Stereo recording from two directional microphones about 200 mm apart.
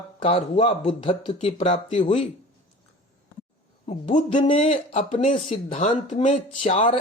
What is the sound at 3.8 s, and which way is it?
Speech, 30° left (ahead or behind).